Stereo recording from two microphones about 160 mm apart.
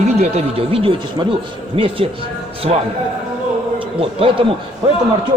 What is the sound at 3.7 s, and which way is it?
Speech, 35° right (ahead or behind).